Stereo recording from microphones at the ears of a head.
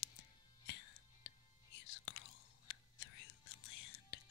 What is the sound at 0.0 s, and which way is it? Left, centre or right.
Music, left.